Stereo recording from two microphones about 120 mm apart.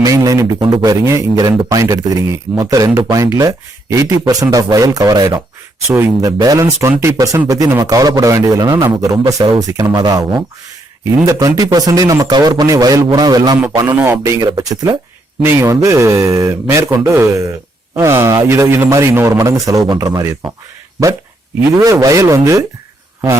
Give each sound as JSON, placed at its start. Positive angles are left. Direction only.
{"t": 0.0, "sound": "a sound", "side_deg": -30}
{"t": 0.6, "sound": "a man's voice", "side_deg": -35}
{"t": 1.0, "sound": "a man's voice", "side_deg": -25}
{"t": 13.8, "sound": "speech", "side_deg": -15}
{"t": 14.4, "sound": "a man's voice", "side_deg": -35}
{"t": 21.8, "sound": "speech", "side_deg": -25}